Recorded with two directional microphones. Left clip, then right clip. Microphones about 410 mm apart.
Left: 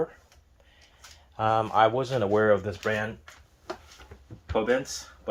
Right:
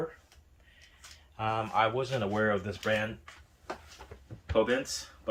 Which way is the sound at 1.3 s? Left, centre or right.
Centre.